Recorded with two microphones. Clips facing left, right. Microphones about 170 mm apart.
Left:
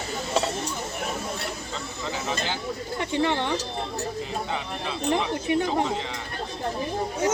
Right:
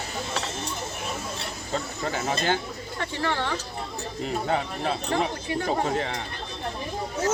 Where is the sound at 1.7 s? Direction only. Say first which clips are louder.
Right 3 dB; 50° right (ahead or behind).